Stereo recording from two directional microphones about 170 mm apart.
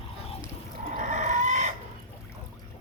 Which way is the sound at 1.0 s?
45° right (ahead or behind).